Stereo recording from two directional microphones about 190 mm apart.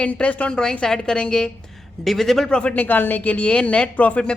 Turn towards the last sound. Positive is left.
turn(degrees=5)  # may be behind; listen again after turning